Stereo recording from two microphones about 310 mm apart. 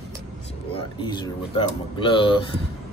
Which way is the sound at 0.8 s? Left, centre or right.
Centre.